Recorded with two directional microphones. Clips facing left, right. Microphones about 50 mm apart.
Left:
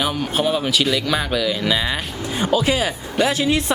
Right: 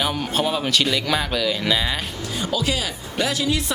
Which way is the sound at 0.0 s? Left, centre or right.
Centre.